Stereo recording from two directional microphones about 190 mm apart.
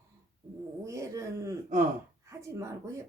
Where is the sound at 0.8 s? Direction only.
15° right (ahead or behind).